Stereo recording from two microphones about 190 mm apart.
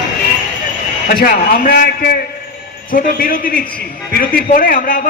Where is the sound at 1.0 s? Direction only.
45° left (ahead or behind).